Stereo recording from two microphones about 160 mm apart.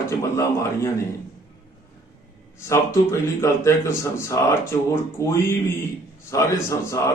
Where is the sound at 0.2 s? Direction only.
20° left (ahead or behind).